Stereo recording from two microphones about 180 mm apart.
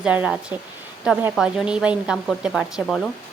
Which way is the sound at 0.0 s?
5° right (ahead or behind).